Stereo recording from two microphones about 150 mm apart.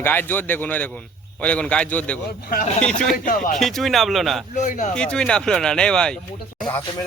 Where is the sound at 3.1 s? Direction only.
65° left (ahead or behind).